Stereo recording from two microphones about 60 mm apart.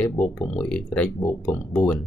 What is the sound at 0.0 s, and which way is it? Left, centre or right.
Speech, left.